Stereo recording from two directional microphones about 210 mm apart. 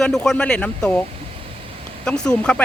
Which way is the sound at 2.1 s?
5° left (ahead or behind).